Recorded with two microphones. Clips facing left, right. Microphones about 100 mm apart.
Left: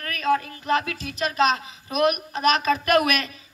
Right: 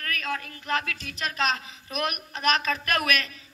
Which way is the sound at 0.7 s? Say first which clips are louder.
Left 5 dB; 10° left (ahead or behind).